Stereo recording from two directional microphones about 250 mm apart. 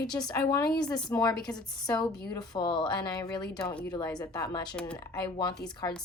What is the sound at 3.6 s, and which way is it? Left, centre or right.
A woman's voice, centre.